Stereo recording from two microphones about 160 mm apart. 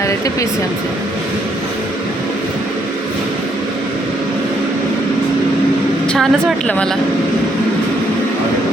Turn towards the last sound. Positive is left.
turn(degrees=5)  # may be behind; listen again after turning